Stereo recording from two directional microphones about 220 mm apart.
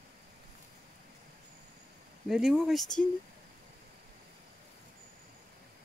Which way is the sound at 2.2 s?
Centre (ahead or behind).